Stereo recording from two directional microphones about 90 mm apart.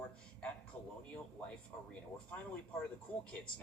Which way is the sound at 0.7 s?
15° left (ahead or behind).